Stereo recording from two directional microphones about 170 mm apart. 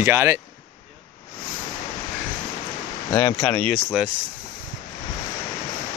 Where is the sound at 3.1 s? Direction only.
20° left (ahead or behind).